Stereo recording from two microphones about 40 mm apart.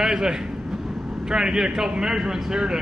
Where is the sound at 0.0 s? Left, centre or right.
Centre.